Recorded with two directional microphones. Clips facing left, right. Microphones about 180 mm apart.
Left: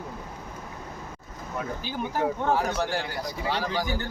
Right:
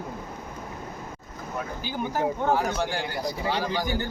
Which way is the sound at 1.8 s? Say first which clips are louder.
Right 1 dB; centre (ahead or behind).